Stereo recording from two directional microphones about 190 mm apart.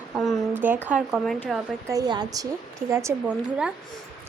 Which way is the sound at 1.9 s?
20° right (ahead or behind).